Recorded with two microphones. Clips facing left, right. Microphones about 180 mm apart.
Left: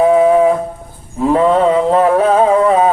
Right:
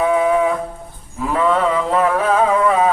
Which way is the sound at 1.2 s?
30° left (ahead or behind).